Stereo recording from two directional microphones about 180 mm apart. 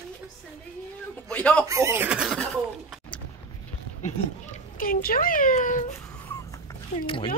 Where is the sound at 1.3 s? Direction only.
5° left (ahead or behind).